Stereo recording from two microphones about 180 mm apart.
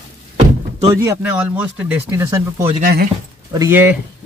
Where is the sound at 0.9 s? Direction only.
15° right (ahead or behind).